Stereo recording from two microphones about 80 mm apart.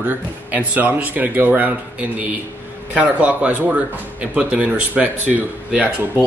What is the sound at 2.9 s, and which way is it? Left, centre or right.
Speech, centre.